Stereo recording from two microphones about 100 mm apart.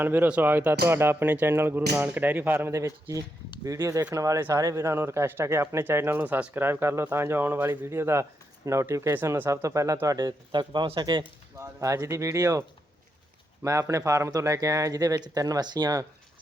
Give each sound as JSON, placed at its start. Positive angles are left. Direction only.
{"t": 0.0, "sound": "speech", "side_deg": -20}
{"t": 2.7, "sound": "speech", "side_deg": -30}
{"t": 11.5, "sound": "speech", "side_deg": -30}